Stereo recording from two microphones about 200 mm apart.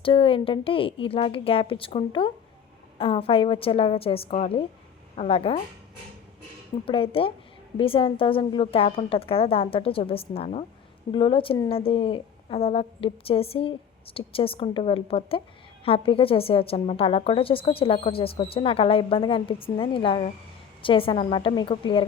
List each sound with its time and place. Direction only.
0.0 s a woman's voice: 25° left (ahead or behind)
6.8 s a woman's voice: 25° left (ahead or behind)